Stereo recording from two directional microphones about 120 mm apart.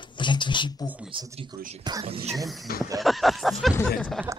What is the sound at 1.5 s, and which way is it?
Speech, 35° right (ahead or behind).